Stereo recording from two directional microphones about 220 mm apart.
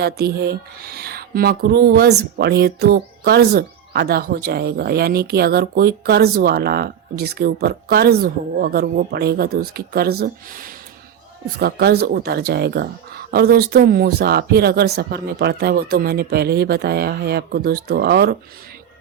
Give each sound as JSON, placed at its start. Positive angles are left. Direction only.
{"t": 0.0, "sound": "speech", "side_deg": -45}